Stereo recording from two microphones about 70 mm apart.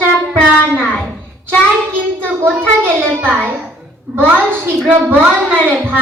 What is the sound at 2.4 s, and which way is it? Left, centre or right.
A child's voice, right.